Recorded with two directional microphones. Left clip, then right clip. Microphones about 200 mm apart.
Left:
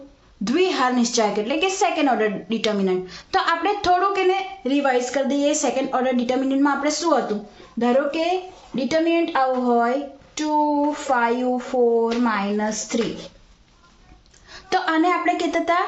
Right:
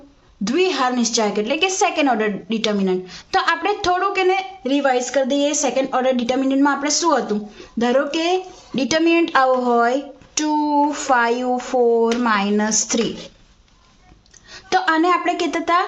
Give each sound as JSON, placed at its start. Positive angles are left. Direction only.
{"t": 0.4, "sound": "a woman's voice", "side_deg": -10}
{"t": 14.5, "sound": "a woman's voice", "side_deg": -15}